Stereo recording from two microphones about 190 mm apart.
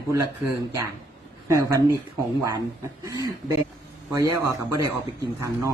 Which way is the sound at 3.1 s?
20° right (ahead or behind).